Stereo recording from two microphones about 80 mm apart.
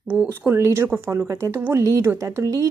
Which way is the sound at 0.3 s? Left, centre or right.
Right.